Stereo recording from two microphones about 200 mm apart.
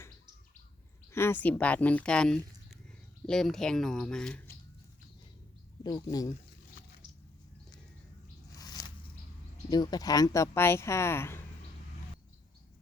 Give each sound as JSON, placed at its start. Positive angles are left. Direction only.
{"t": 1.1, "sound": "speech", "side_deg": 10}
{"t": 5.8, "sound": "speech", "side_deg": 20}
{"t": 8.5, "sound": "a sound", "side_deg": 20}
{"t": 9.6, "sound": "speech", "side_deg": 20}